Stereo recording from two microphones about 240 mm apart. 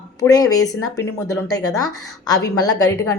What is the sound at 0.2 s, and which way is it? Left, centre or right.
A woman's voice, centre.